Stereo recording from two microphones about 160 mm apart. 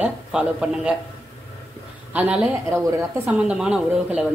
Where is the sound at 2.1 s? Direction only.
10° right (ahead or behind).